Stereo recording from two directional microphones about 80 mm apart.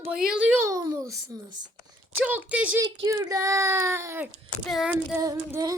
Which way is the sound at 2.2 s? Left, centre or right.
Centre.